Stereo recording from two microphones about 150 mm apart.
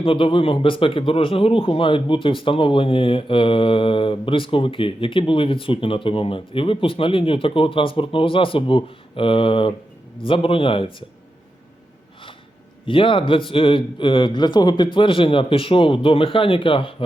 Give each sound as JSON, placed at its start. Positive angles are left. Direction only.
{"t": 0.0, "sound": "speech", "side_deg": 35}
{"t": 12.8, "sound": "speech", "side_deg": 35}